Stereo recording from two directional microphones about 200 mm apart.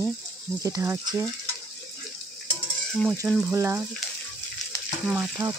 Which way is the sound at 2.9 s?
Centre (ahead or behind).